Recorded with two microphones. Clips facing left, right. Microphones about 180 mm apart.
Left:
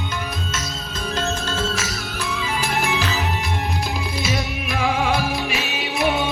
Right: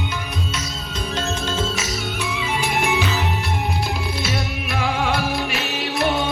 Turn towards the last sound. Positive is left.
turn(degrees=0)  # may be behind; listen again after turning